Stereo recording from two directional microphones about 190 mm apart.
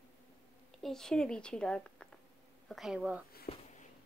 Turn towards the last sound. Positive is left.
turn(degrees=35)  # may be behind; listen again after turning